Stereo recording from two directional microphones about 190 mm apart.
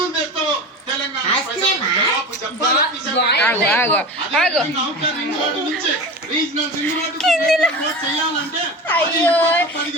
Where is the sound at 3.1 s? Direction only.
60° left (ahead or behind).